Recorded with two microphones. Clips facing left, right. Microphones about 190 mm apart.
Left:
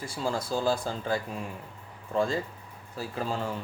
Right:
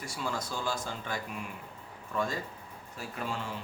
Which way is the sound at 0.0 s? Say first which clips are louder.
Left 5 dB; 30° left (ahead or behind).